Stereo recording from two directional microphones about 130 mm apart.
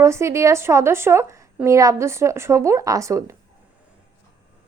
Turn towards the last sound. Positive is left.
turn(degrees=-25)  # may be behind; listen again after turning